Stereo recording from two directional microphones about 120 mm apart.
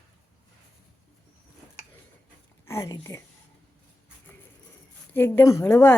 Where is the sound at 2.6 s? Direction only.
25° left (ahead or behind).